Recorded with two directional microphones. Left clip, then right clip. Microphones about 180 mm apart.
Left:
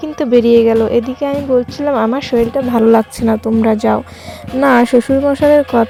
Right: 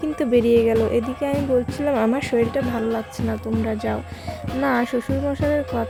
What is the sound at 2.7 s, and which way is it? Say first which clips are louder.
Speech: left 14 dB; 40° left (ahead or behind).